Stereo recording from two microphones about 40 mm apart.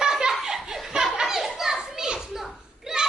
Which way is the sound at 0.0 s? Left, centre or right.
Centre.